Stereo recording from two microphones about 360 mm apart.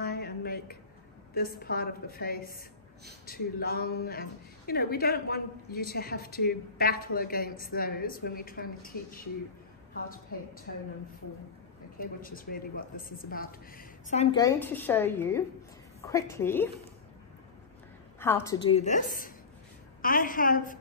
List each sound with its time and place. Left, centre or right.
0.0 s a sound: left
1.3 s speech: left
12.0 s a woman's voice: left; by 16.7 s centre
18.2 s a woman's voice: centre